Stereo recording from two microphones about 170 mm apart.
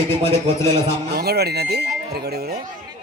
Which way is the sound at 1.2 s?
70° right (ahead or behind).